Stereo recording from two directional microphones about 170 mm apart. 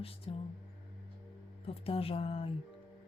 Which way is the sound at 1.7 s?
35° left (ahead or behind).